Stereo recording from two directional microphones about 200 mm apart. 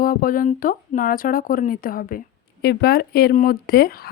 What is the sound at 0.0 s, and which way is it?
Speech, 45° left (ahead or behind).